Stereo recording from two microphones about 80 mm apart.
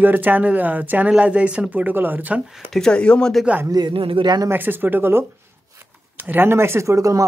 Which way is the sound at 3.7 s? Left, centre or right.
Right.